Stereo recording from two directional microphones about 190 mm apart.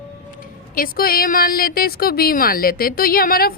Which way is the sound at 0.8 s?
50° left (ahead or behind).